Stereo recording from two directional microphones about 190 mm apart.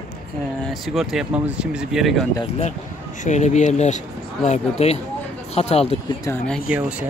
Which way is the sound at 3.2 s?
40° left (ahead or behind).